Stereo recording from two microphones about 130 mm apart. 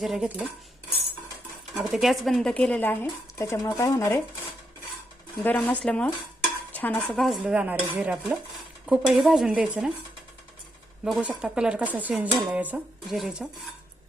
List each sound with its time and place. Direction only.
0.0 s stir: 5° right (ahead or behind)
1.7 s speech: 5° right (ahead or behind); by 4.2 s 20° left (ahead or behind)
5.4 s speech: 10° left (ahead or behind)
6.7 s stir: 15° left (ahead or behind)
7.2 s dishes: centre (ahead or behind)
8.9 s stir: 5° right (ahead or behind)
11.0 s dishes: 5° right (ahead or behind)
13.1 s stir: centre (ahead or behind)